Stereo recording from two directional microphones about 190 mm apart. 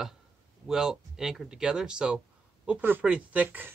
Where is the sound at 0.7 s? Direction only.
Centre (ahead or behind).